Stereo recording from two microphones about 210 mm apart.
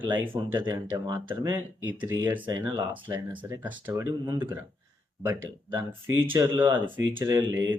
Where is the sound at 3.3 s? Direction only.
20° right (ahead or behind).